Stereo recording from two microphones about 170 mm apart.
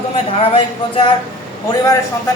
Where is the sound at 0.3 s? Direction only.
35° left (ahead or behind).